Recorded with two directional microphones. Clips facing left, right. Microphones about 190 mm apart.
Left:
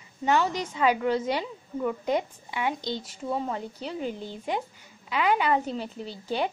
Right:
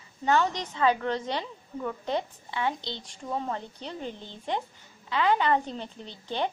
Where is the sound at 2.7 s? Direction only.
40° left (ahead or behind).